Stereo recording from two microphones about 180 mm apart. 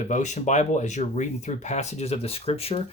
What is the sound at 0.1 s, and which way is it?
Speech, 40° left (ahead or behind).